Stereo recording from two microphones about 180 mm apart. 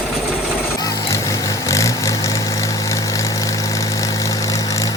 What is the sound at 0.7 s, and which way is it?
Vehicle, 20° left (ahead or behind).